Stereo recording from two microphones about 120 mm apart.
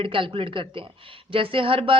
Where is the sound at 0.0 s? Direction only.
50° right (ahead or behind).